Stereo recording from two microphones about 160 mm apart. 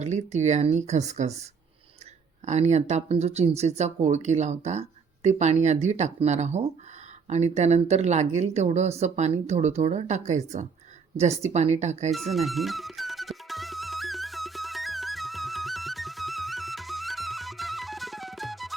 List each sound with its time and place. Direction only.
0.0 s speech: 45° right (ahead or behind)
2.5 s speech: 45° right (ahead or behind)
12.1 s music: centre (ahead or behind)